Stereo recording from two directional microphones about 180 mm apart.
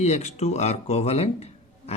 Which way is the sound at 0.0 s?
40° left (ahead or behind).